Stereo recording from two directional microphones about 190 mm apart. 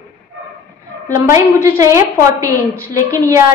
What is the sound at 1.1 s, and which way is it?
A woman's voice, 15° right (ahead or behind).